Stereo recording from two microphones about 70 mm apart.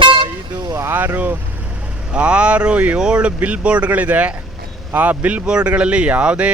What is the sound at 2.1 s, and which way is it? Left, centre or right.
Speech, centre.